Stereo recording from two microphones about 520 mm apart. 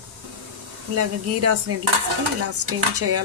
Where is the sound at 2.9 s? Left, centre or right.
Right.